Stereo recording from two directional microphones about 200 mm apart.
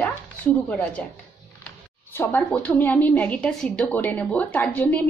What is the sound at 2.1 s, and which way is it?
A woman's voice, 10° left (ahead or behind).